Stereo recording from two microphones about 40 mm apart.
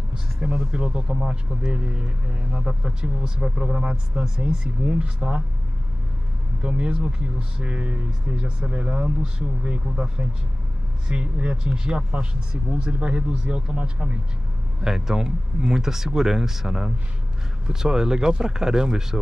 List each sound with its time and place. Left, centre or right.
0.1 s a sound: right
0.6 s speech: centre
4.8 s speech: right
6.6 s speech: right
14.8 s speech: centre